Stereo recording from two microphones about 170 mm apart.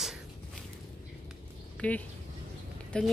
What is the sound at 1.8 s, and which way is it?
Speech, 10° left (ahead or behind).